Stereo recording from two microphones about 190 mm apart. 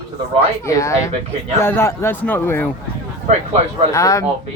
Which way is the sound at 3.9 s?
15° left (ahead or behind).